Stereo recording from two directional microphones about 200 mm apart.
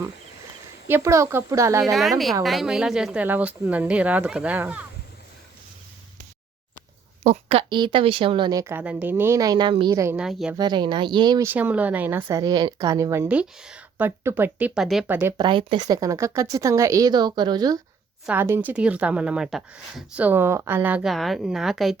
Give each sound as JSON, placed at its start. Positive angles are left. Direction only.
{"t": 0.9, "sound": "speech", "side_deg": -15}
{"t": 1.8, "sound": "speech", "side_deg": 0}
{"t": 7.3, "sound": "a woman's voice", "side_deg": -30}
{"t": 10.2, "sound": "speech", "side_deg": -5}
{"t": 10.5, "sound": "speech", "side_deg": -20}
{"t": 15.4, "sound": "a woman's voice", "side_deg": -25}